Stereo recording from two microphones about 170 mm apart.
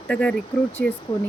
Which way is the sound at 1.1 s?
25° left (ahead or behind).